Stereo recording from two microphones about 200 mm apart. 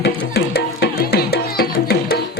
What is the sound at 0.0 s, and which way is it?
Music, 55° left (ahead or behind).